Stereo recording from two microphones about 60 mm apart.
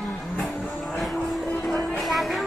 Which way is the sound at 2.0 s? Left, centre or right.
Centre.